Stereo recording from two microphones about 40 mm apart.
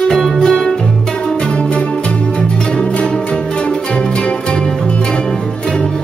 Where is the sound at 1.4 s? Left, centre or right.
Left.